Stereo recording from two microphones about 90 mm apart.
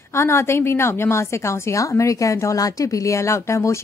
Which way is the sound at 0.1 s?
30° left (ahead or behind).